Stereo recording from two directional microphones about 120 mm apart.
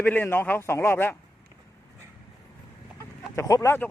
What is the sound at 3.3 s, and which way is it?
Speech, 25° left (ahead or behind).